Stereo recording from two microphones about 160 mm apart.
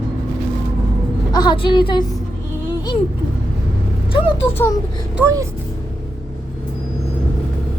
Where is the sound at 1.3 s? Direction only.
25° left (ahead or behind).